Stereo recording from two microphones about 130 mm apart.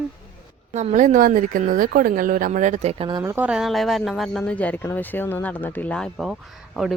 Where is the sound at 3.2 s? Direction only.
15° right (ahead or behind).